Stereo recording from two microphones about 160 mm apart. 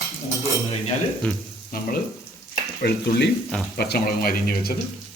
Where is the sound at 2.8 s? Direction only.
75° left (ahead or behind).